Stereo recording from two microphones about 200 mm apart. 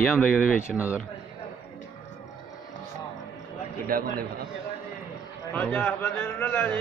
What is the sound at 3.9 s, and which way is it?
Speech, 45° right (ahead or behind).